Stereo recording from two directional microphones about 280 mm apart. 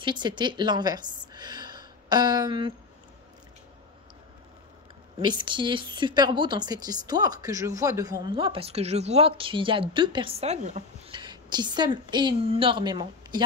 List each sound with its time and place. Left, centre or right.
0.0 s a woman's voice: centre
5.2 s a woman's voice: centre